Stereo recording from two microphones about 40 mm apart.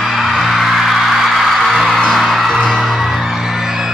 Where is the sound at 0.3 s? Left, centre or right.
Centre.